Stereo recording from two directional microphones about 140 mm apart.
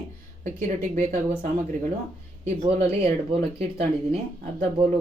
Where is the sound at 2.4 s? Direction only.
50° right (ahead or behind).